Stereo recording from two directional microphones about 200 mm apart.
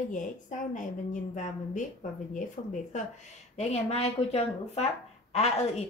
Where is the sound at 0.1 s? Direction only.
40° left (ahead or behind).